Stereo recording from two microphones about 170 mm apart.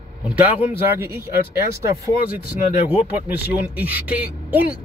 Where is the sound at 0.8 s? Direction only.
15° right (ahead or behind).